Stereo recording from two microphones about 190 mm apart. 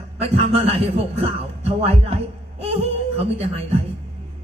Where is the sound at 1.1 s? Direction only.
30° right (ahead or behind).